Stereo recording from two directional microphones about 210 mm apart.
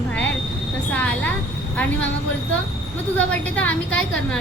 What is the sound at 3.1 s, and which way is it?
A woman's voice, 5° left (ahead or behind).